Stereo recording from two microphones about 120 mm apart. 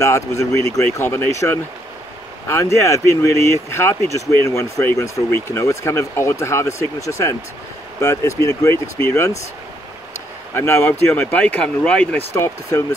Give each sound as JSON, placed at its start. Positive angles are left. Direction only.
{"t": 0.0, "sound": "speech", "side_deg": 25}
{"t": 10.5, "sound": "speech", "side_deg": 20}
{"t": 12.4, "sound": "speech", "side_deg": 25}